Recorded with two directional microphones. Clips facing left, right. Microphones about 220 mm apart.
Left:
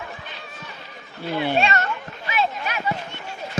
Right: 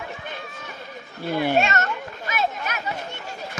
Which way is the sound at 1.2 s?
45° right (ahead or behind).